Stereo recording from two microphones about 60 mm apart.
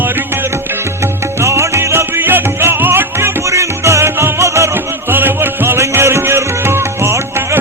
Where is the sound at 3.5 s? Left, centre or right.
Right.